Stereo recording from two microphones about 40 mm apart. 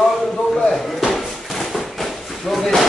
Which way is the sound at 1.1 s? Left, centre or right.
Centre.